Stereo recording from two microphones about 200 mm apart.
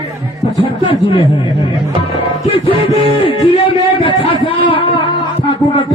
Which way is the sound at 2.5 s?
25° left (ahead or behind).